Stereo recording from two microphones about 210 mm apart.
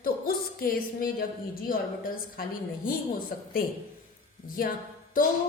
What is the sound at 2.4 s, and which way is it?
Speech, 45° left (ahead or behind).